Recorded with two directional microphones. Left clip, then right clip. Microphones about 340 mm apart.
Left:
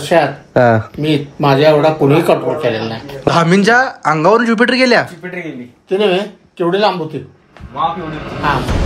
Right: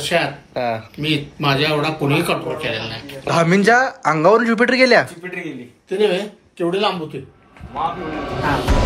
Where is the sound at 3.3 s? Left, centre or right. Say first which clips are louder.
Left 3 dB; centre.